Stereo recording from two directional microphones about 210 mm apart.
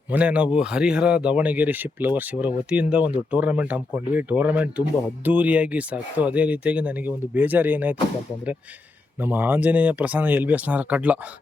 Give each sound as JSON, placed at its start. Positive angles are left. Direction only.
{"t": 0.1, "sound": "speech", "side_deg": -5}
{"t": 9.2, "sound": "speech", "side_deg": -10}